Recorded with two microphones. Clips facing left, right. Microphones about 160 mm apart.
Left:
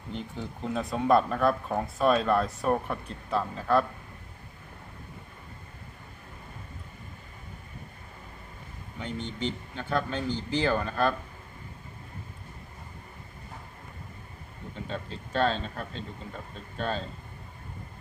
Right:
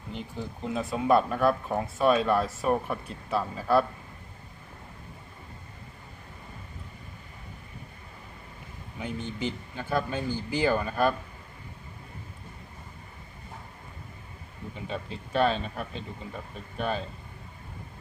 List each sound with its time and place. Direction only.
0.1 s speech: 5° right (ahead or behind)
9.0 s a man's voice: 10° right (ahead or behind)
14.8 s a man's voice: 10° right (ahead or behind)